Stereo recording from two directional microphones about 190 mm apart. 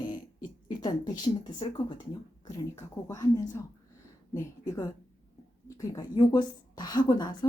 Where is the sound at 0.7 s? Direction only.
20° left (ahead or behind).